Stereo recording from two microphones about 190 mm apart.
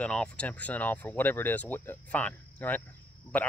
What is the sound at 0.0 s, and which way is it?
Speech, 5° left (ahead or behind).